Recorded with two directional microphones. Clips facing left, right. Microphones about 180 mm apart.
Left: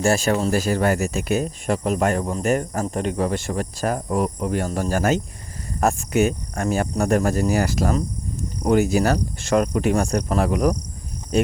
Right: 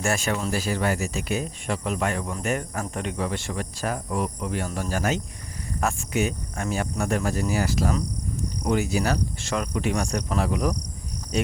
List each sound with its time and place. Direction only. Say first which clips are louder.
0.0 s speech: left 7 dB; 35° left (ahead or behind)